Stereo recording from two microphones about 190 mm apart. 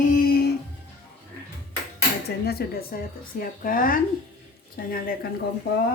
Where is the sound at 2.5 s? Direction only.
55° left (ahead or behind).